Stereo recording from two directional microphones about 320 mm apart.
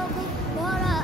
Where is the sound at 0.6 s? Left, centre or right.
Centre.